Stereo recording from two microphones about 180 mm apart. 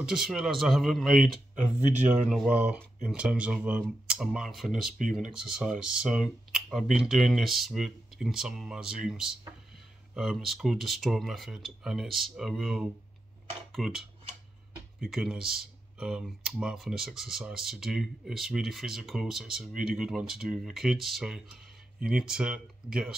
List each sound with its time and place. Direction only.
0.0 s speech: 5° right (ahead or behind)
15.0 s speech: centre (ahead or behind)